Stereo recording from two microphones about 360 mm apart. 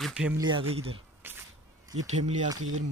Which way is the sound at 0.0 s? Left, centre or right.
Centre.